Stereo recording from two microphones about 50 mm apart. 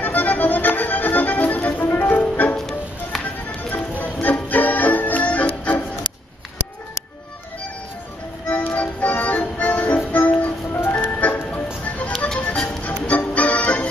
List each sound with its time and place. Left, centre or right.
0.0 s accordion: left
1.9 s music: left
2.5 s music: centre
3.7 s music: left
8.5 s music: left
10.9 s ice cream truck: left
12.6 s music: left